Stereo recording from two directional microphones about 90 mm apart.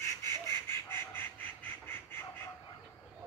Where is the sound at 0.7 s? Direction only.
25° left (ahead or behind).